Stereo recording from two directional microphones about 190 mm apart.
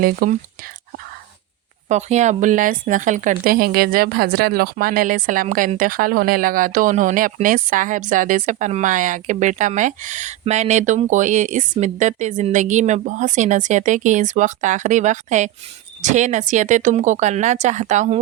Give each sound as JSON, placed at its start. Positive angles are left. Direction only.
{"t": 0.0, "sound": "a woman's voice", "side_deg": -50}
{"t": 1.9, "sound": "a woman's voice", "side_deg": -35}